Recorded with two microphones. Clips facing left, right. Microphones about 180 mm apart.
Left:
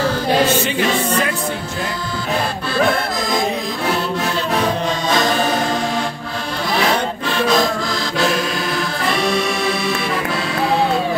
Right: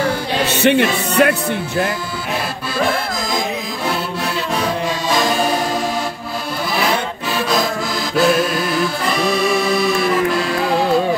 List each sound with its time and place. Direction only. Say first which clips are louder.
0.6 s music: right 4 dB; 65° right (ahead or behind)
7.2 s music: left 2 dB; 5° right (ahead or behind)